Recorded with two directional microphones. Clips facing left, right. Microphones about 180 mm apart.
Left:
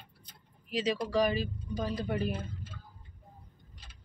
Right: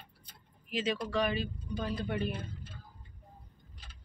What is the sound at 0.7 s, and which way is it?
Speech, 35° left (ahead or behind).